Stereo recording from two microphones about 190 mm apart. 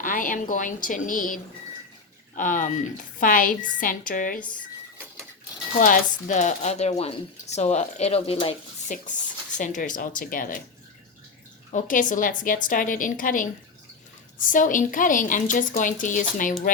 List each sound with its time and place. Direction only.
0.0 s speech: 45° left (ahead or behind)
5.8 s speech: 45° left (ahead or behind)
9.6 s speech: 40° left (ahead or behind)
11.7 s speech: 45° left (ahead or behind)